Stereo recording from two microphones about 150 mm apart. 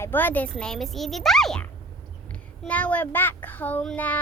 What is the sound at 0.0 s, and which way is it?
A woman's voice, 15° left (ahead or behind).